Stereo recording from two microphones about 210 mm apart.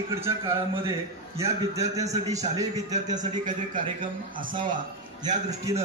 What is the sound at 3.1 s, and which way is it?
Speech, 40° right (ahead or behind).